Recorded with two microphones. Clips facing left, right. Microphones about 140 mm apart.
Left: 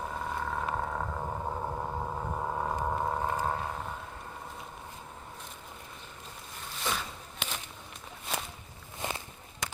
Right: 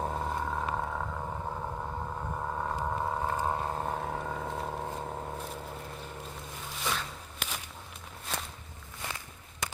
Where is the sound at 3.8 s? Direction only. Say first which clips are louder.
Right 7 dB; 60° right (ahead or behind); by 4.8 s 80° right.